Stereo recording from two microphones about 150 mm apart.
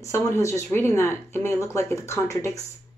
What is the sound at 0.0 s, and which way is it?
Speech, 20° left (ahead or behind).